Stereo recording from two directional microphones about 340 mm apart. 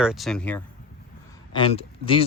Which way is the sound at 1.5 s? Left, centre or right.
Centre.